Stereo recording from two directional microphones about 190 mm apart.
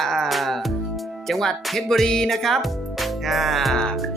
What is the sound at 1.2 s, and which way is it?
Music, centre (ahead or behind).